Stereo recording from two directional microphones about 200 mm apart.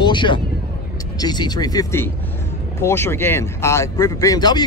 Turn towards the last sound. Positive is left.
turn(degrees=20)  # may be behind; listen again after turning